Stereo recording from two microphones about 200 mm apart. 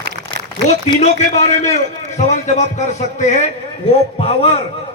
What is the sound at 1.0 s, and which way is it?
A man's voice, 35° left (ahead or behind).